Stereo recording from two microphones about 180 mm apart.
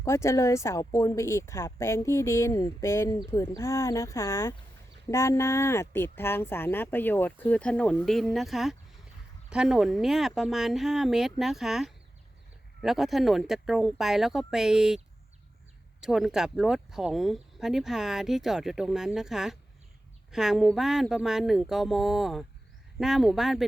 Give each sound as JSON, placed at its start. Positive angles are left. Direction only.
{"t": 0.0, "sound": "speech", "side_deg": 15}